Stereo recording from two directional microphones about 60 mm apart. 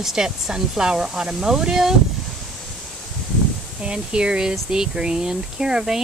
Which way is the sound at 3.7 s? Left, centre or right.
Centre.